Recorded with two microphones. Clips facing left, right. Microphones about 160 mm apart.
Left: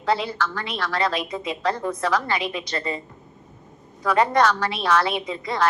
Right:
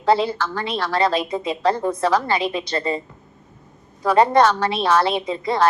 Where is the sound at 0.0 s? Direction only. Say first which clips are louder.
Right 5 dB; 30° right (ahead or behind).